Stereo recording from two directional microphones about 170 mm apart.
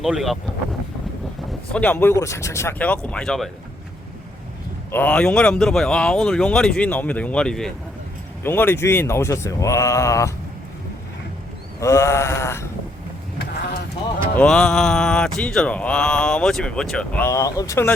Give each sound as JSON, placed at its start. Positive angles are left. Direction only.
{"t": 0.0, "sound": "speech", "side_deg": 0}
{"t": 1.7, "sound": "speech", "side_deg": 10}
{"t": 4.9, "sound": "speech", "side_deg": 10}
{"t": 11.8, "sound": "speech", "side_deg": 15}
{"t": 13.4, "sound": "sheep", "side_deg": 75}
{"t": 14.3, "sound": "speech", "side_deg": 5}